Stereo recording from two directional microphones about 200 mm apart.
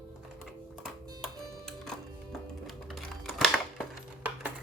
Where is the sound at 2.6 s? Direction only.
Centre (ahead or behind).